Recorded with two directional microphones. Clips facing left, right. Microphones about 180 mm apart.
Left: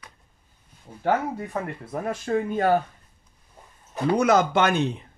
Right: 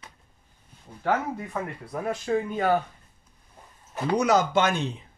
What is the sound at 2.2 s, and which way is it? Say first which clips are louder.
Speech: left 3 dB; 50° left (ahead or behind).